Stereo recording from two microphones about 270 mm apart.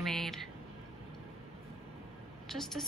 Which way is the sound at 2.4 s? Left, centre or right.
Centre.